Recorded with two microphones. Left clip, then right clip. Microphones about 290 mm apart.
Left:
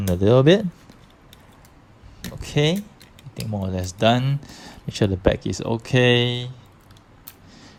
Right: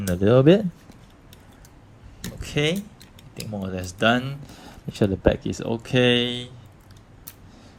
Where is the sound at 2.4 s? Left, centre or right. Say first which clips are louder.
Left 2 dB; centre.